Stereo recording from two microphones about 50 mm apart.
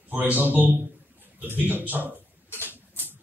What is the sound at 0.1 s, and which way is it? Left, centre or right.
A man's voice, right.